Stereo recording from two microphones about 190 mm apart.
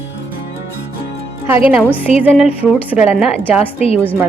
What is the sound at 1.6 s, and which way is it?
Speech, 10° right (ahead or behind).